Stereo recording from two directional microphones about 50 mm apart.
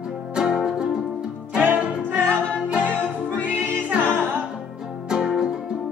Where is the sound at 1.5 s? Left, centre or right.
Right.